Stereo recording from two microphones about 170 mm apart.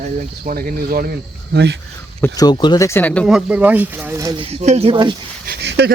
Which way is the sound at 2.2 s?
20° left (ahead or behind).